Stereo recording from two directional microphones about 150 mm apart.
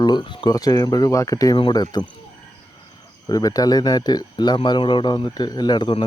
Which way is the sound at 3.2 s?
25° left (ahead or behind).